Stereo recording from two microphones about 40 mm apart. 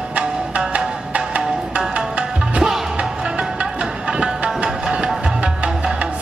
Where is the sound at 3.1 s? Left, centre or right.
Right.